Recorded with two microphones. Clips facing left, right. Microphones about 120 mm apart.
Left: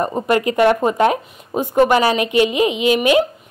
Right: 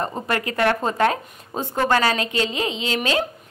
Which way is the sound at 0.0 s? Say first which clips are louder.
Left 7 dB; 20° left (ahead or behind).